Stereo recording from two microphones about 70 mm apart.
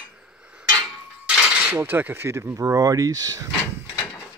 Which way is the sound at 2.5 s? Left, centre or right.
Right.